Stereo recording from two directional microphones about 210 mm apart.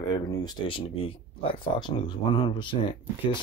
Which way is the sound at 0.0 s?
20° left (ahead or behind).